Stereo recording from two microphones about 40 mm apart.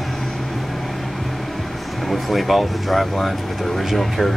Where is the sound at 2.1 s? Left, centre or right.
Centre.